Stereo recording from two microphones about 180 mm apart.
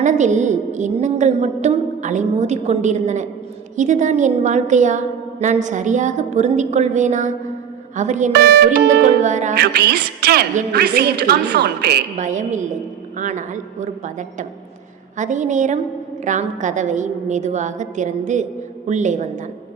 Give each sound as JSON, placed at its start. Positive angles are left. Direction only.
{"t": 0.0, "sound": "a woman's voice", "side_deg": -40}
{"t": 8.3, "sound": "a woman's voice", "side_deg": -60}
{"t": 9.2, "sound": "a woman's voice", "side_deg": -40}
{"t": 9.6, "sound": "a woman's voice", "side_deg": -65}
{"t": 12.1, "sound": "a woman's voice", "side_deg": -45}